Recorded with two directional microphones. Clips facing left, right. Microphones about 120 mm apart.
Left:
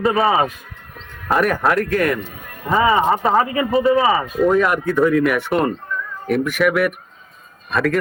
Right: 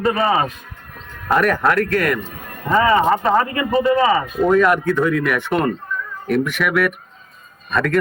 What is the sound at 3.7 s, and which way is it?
Speech, centre (ahead or behind).